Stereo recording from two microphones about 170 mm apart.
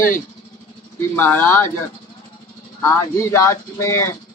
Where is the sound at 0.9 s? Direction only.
10° left (ahead or behind).